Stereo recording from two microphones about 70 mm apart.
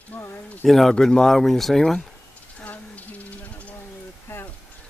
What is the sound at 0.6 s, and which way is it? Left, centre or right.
Speech, centre.